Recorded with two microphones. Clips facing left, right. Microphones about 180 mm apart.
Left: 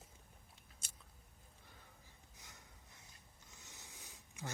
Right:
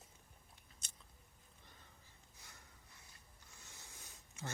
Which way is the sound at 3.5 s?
15° left (ahead or behind).